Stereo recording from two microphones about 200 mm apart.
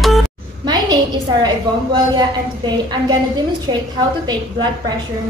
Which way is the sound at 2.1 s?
20° right (ahead or behind).